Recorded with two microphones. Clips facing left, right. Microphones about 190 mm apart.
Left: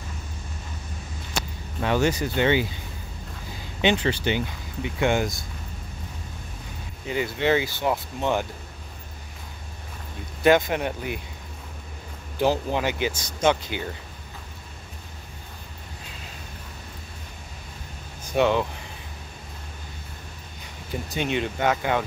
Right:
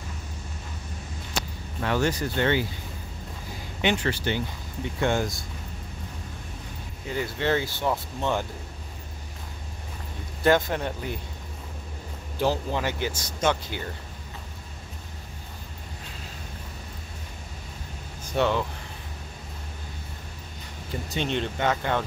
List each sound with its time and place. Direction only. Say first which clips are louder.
1.8 s speech: left 3 dB; 15° left (ahead or behind)
3.8 s speech: left 3 dB; 20° left (ahead or behind)
7.2 s speech: left 3 dB; 15° left (ahead or behind)
10.4 s speech: left 3 dB; 15° left (ahead or behind)
12.4 s speech: left 3 dB; 15° left (ahead or behind)
18.3 s speech: left 3 dB; 15° left (ahead or behind)
21.2 s speech: left 2 dB; 10° left (ahead or behind)